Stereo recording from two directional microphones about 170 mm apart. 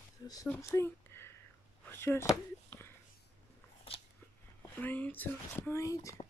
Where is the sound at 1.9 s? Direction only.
15° left (ahead or behind).